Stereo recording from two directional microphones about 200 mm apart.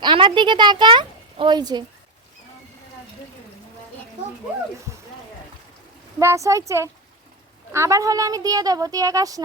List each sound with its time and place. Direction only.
0.0 s a child's voice: 25° right (ahead or behind)
6.1 s speech: 15° right (ahead or behind)